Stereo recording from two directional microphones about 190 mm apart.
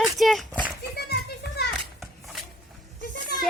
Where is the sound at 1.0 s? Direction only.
60° left (ahead or behind).